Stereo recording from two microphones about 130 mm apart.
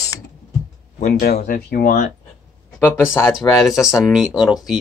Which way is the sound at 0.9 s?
80° left.